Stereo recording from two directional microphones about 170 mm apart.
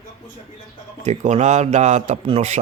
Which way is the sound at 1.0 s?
40° right (ahead or behind).